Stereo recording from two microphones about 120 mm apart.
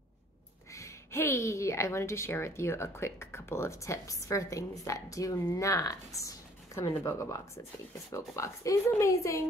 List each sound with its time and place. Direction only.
0.7 s a woman's voice: 25° left (ahead or behind)